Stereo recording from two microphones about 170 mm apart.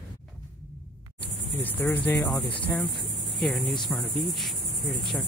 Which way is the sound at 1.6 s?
10° left (ahead or behind).